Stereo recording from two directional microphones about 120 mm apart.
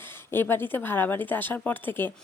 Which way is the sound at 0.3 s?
20° left (ahead or behind).